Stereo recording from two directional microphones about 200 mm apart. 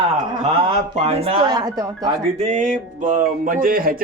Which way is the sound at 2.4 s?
40° right (ahead or behind).